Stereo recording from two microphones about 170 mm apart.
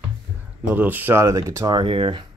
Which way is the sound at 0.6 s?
10° right (ahead or behind).